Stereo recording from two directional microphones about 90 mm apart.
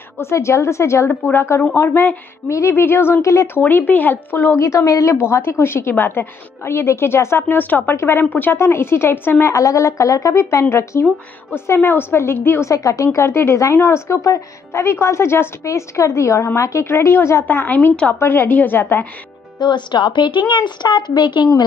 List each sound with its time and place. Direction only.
0.2 s a woman's voice: 30° left (ahead or behind)
3.6 s a woman's voice: 20° left (ahead or behind)
9.5 s a woman's voice: 35° left (ahead or behind)
19.6 s a woman's voice: 60° left (ahead or behind)